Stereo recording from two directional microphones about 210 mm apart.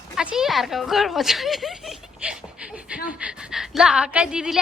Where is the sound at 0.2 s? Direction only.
5° right (ahead or behind).